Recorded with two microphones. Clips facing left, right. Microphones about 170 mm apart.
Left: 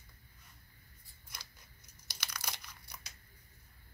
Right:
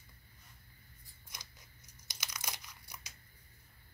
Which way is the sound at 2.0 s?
15° right (ahead or behind).